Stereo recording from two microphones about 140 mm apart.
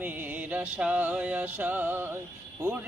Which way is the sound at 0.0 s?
15° right (ahead or behind).